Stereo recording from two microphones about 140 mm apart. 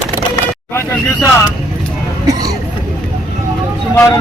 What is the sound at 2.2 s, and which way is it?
Speech, 25° right (ahead or behind).